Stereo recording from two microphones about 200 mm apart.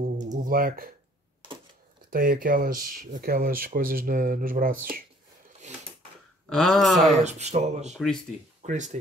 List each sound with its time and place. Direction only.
0.2 s a sound: 40° right (ahead or behind)
2.0 s speech: 45° right (ahead or behind)
6.5 s speech: centre (ahead or behind)
7.2 s speech: 35° right (ahead or behind)